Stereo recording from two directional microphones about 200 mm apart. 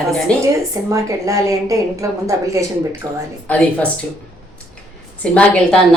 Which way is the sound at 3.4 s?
5° left (ahead or behind).